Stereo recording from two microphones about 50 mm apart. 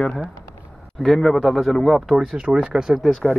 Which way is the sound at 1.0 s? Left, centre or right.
Centre.